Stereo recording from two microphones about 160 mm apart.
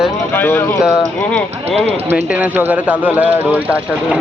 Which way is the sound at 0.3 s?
10° left (ahead or behind).